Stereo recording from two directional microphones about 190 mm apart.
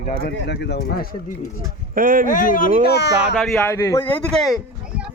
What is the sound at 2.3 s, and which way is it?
Speech, 45° left (ahead or behind).